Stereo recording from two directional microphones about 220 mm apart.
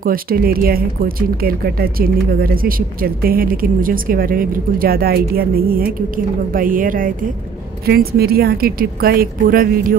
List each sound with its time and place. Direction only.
0.0 s a woman's voice: 40° right (ahead or behind)